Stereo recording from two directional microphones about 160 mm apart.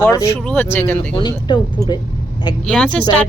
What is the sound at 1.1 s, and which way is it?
Speech, 30° left (ahead or behind).